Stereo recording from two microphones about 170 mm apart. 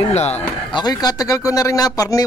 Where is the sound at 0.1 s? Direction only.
40° left (ahead or behind).